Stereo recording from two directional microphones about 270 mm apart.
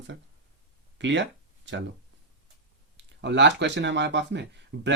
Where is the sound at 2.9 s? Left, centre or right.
Right.